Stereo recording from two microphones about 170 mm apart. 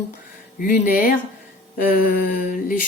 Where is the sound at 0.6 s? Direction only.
55° left (ahead or behind).